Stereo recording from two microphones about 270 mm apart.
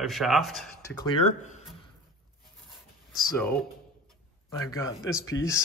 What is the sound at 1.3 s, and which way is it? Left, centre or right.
Speech, left.